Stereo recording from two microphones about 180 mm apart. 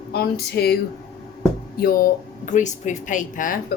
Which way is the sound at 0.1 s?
60° left (ahead or behind).